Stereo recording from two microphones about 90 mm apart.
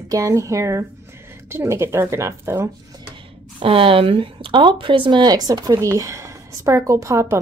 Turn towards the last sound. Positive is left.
turn(degrees=-35)  # may be behind; listen again after turning